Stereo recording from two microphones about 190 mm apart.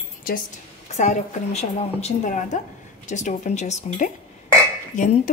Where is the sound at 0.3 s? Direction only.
50° left (ahead or behind).